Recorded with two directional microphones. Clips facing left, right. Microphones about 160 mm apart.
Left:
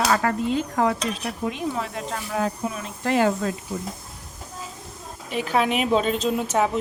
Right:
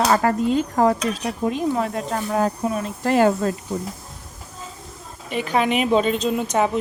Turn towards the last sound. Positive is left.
turn(degrees=5)  # may be behind; listen again after turning